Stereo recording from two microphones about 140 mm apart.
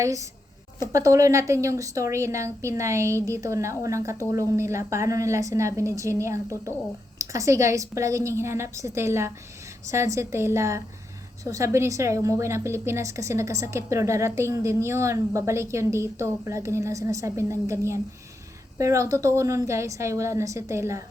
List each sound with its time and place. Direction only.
0.0 s a woman's voice: 25° right (ahead or behind)